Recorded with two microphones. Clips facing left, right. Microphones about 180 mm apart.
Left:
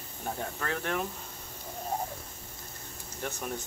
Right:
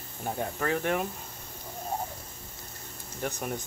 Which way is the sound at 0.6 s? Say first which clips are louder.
Right 5 dB; 15° right (ahead or behind).